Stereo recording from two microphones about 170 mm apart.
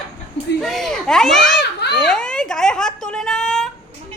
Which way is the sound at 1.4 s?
85° left.